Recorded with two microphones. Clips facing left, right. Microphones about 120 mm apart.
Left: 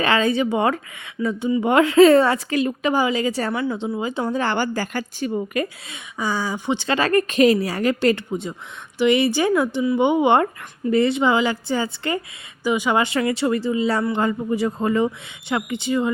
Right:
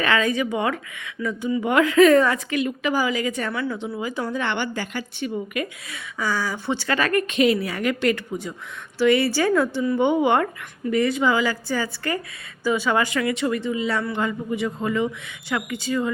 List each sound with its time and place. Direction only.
0.0 s speech: 30° left (ahead or behind)
3.5 s speech: 20° left (ahead or behind); by 5.6 s 35° left (ahead or behind)
5.9 s speech: 20° left (ahead or behind); by 15.1 s 35° left (ahead or behind)
15.4 s speech: 25° left (ahead or behind)